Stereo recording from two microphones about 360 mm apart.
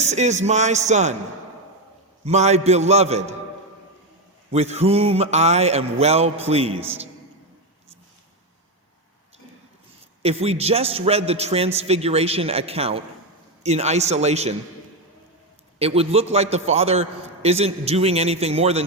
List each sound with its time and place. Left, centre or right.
0.0 s a man's voice: centre
2.2 s a man's voice: centre
4.5 s a man's voice: centre
10.2 s a man's voice: centre
15.8 s a man's voice: centre